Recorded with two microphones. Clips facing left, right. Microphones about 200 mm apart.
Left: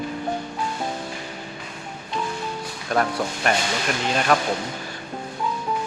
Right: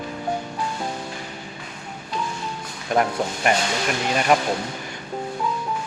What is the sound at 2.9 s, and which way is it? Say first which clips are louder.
Speech: right 2 dB; 20° right (ahead or behind).